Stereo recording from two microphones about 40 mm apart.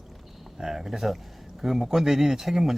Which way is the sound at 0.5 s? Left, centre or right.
Centre.